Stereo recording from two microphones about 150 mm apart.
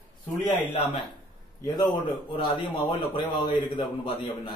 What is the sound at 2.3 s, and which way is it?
A man's voice, 35° left (ahead or behind).